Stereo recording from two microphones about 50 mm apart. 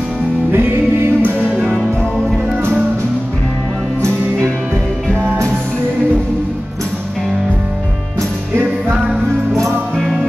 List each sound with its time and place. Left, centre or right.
0.5 s music: right
1.5 s music: centre